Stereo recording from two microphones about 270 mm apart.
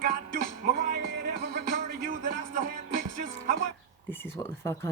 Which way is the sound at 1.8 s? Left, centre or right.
Right.